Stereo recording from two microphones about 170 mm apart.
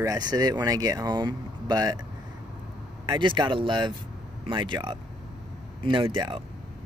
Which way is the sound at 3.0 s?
25° right (ahead or behind).